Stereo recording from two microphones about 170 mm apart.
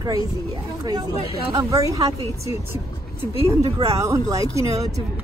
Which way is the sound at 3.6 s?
35° right (ahead or behind).